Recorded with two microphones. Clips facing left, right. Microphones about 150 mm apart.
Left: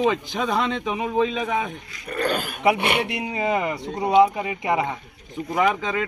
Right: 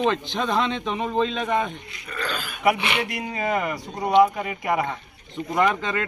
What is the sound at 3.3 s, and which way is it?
Speech, 20° left (ahead or behind).